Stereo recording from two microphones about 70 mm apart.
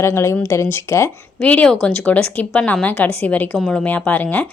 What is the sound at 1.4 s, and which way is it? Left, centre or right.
A woman's voice, centre.